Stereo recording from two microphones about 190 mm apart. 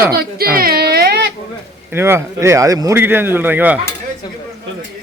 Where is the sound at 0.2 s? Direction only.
50° right (ahead or behind).